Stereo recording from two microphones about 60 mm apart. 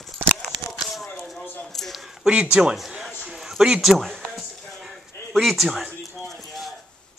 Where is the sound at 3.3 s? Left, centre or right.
Centre.